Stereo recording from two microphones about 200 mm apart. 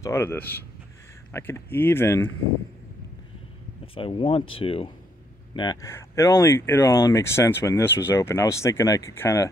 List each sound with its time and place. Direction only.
0.0 s speech: 10° left (ahead or behind)
3.8 s speech: 25° left (ahead or behind)